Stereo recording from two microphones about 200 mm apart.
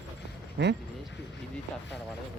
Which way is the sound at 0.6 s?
60° right (ahead or behind).